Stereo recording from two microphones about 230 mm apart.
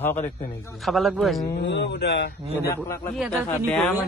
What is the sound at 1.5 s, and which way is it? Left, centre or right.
Speech, left.